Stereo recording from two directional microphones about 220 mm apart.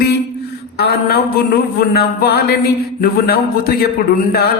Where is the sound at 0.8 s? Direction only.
45° left (ahead or behind).